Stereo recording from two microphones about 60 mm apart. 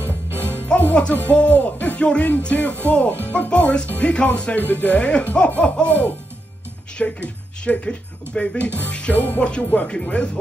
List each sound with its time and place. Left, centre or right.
0.0 s music: left
1.1 s speech: left
4.6 s speech: left
7.0 s speech: centre